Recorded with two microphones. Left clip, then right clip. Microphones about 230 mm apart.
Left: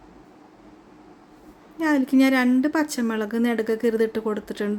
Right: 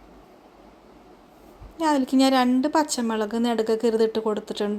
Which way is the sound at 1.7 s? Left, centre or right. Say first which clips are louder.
Left 1 dB; centre.